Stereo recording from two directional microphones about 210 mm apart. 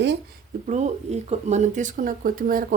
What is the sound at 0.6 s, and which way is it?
Speech, 35° right (ahead or behind).